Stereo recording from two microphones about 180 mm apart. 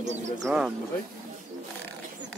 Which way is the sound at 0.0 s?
40° right (ahead or behind).